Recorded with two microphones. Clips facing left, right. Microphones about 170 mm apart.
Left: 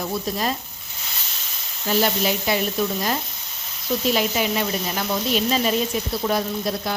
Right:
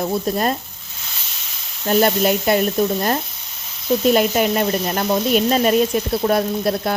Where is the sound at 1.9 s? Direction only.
50° right (ahead or behind).